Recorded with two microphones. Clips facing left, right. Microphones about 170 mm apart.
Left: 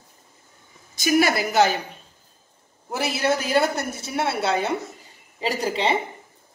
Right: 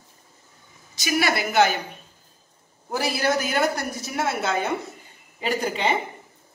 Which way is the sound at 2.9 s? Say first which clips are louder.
Even; 20° left (ahead or behind).